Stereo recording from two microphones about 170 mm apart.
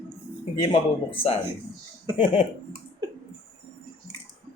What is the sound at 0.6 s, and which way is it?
Speech, 30° left (ahead or behind).